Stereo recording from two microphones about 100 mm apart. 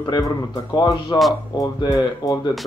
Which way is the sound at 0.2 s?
40° left (ahead or behind).